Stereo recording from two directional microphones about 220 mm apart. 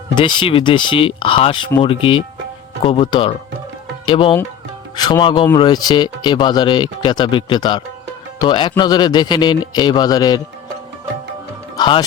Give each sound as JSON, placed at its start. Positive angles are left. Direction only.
{"t": 0.2, "sound": "speech", "side_deg": 20}
{"t": 11.8, "sound": "speech", "side_deg": 20}